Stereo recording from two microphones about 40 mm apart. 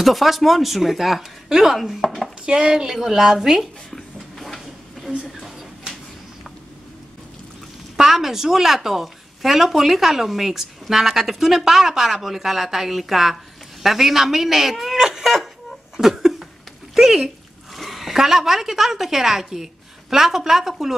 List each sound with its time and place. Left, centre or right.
0.0 s a woman's voice: centre
2.0 s chopping: centre
2.4 s a woman's voice: centre
3.9 s a sound: centre
8.0 s a woman's voice: centre
16.0 s a sound: centre
16.9 s a woman's voice: centre